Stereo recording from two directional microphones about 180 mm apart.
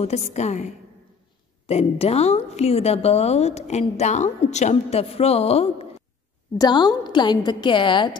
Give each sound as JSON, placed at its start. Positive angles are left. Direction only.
{"t": 0.0, "sound": "a woman's voice", "side_deg": 40}
{"t": 6.6, "sound": "a woman's voice", "side_deg": 20}